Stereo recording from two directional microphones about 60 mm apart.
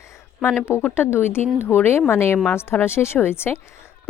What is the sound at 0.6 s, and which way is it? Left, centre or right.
Speech, left.